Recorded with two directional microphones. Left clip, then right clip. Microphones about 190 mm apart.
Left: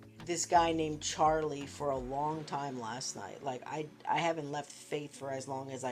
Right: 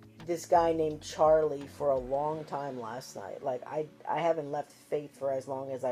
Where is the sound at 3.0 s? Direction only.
55° left (ahead or behind).